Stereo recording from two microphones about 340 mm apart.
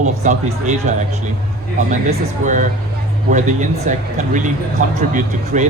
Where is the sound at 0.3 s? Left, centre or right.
Right.